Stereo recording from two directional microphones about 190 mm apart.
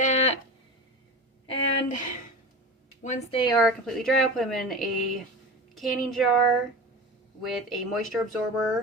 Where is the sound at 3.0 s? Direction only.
35° left (ahead or behind).